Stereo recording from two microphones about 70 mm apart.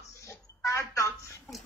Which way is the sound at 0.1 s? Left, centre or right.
Left.